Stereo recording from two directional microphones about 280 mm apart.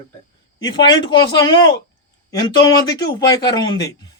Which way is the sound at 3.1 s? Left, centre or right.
Centre.